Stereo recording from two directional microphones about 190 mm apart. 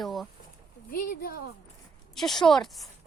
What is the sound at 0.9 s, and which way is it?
Speech, 50° left (ahead or behind).